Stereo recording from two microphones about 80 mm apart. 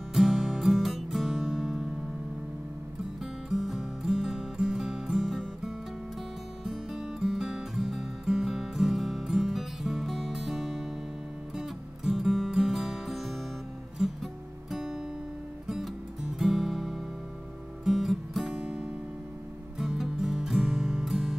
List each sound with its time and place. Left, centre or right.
0.1 s music: centre
3.2 s music: centre